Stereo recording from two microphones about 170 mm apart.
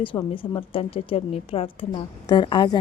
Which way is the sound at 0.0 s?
30° left (ahead or behind).